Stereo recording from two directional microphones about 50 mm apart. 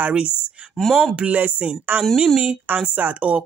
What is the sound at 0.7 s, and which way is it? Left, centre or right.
Speech, centre.